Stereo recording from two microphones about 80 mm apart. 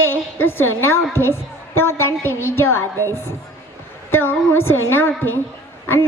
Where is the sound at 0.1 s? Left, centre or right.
Left.